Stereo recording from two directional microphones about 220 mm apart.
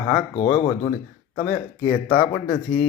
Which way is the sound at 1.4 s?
35° left (ahead or behind).